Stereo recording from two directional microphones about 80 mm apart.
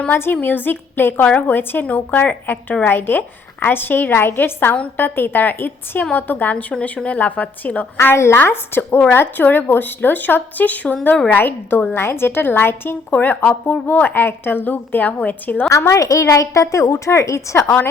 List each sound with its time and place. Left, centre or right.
0.1 s a woman's voice: left
7.9 s a woman's voice: left
15.9 s a woman's voice: left